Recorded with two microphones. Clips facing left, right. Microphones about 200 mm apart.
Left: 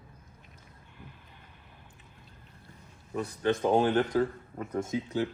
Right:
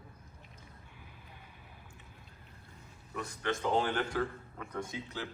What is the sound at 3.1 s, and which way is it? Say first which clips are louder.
Speech: left 7 dB; 35° left (ahead or behind).